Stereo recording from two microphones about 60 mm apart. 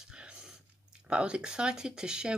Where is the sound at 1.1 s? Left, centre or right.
Centre.